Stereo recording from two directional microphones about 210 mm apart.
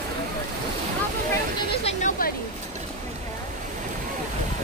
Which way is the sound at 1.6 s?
30° left (ahead or behind).